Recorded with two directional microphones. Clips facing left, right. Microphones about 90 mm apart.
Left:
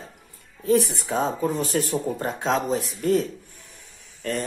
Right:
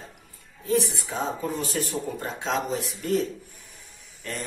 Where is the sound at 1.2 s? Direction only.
40° left (ahead or behind).